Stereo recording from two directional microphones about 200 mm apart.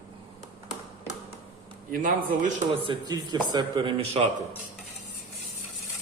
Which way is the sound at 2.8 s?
25° right (ahead or behind).